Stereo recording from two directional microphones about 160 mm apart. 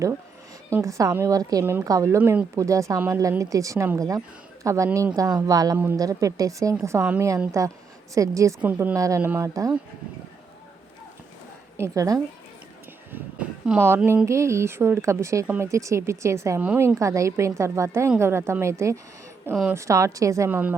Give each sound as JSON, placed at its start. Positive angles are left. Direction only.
{"t": 0.7, "sound": "a woman's voice", "side_deg": -20}
{"t": 7.6, "sound": "a woman's voice", "side_deg": -20}
{"t": 11.8, "sound": "a woman's voice", "side_deg": -20}
{"t": 13.1, "sound": "a woman's voice", "side_deg": -10}